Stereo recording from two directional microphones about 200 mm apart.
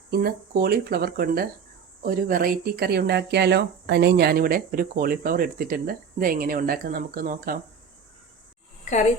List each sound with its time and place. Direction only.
0.1 s speech: 50° right (ahead or behind)